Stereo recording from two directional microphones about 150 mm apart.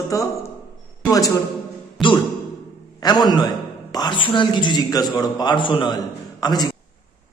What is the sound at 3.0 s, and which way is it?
A man's voice, 30° left (ahead or behind).